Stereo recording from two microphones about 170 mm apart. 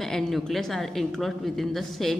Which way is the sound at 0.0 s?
Centre (ahead or behind).